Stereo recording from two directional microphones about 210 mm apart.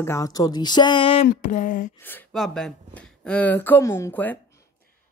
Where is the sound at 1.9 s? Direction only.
10° left (ahead or behind).